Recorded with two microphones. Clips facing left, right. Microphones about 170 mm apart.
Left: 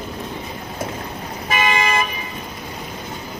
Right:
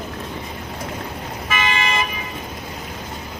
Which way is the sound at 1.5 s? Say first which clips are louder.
Left 3 dB; 40° left (ahead or behind).